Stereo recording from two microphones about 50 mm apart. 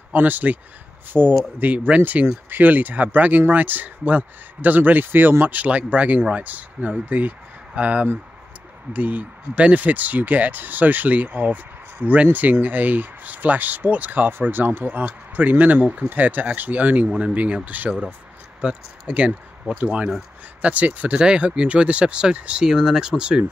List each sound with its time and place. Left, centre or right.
0.1 s speech: right
1.1 s speech: centre
1.9 s speech: right
18.6 s speech: right